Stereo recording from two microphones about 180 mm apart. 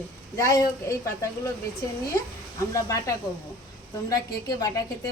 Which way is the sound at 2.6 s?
20° left (ahead or behind).